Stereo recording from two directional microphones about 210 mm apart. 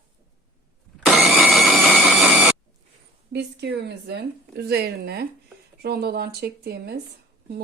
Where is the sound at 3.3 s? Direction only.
55° right (ahead or behind).